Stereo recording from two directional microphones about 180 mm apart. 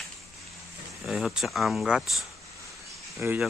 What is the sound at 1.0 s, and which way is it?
Speech, centre (ahead or behind).